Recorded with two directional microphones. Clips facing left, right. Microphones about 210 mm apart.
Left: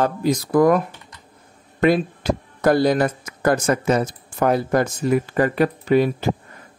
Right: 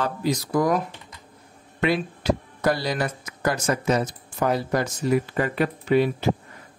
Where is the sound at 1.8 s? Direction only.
45° left (ahead or behind).